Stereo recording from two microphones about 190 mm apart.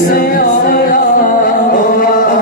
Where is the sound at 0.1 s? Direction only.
50° left (ahead or behind).